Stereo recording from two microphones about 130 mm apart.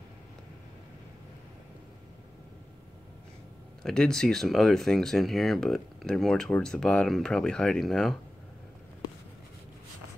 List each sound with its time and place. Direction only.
3.8 s speech: 5° left (ahead or behind)